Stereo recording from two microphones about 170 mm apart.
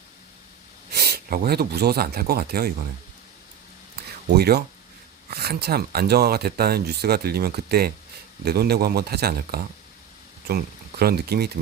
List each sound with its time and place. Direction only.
0.9 s speech: 65° right (ahead or behind)
4.4 s speech: 70° right (ahead or behind)
11.0 s speech: 65° right (ahead or behind)